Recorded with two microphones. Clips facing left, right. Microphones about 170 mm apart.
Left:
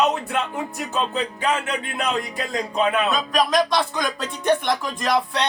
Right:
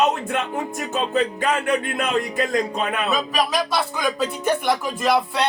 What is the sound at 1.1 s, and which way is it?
Speech, 45° right (ahead or behind).